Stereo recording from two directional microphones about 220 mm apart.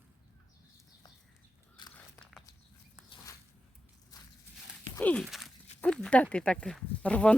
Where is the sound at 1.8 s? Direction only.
20° left (ahead or behind).